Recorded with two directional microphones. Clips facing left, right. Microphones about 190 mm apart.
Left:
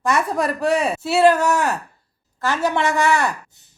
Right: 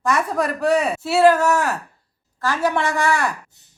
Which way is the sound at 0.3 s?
25° left (ahead or behind).